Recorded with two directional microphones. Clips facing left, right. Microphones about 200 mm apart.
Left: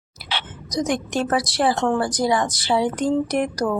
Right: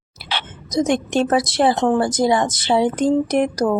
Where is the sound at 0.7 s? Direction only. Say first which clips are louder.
Right 5 dB; 25° right (ahead or behind).